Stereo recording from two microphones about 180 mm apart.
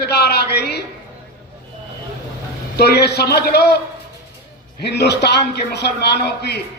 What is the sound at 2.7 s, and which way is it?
A man's voice, 65° left (ahead or behind).